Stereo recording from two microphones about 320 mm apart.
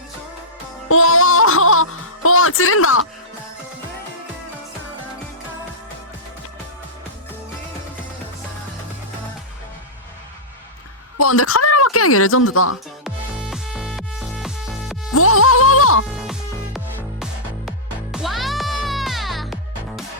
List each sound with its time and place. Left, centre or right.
0.9 s music: left
11.2 s speech: left
13.1 s music: centre
15.1 s mosquito: left
16.1 s music: centre